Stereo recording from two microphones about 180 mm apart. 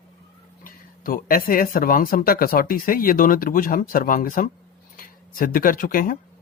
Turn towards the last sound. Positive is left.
turn(degrees=50)  # may be behind; listen again after turning